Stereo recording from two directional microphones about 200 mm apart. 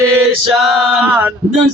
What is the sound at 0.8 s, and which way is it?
Male singing, 5° right (ahead or behind).